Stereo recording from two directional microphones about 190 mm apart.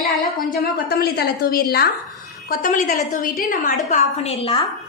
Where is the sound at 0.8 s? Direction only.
55° left (ahead or behind).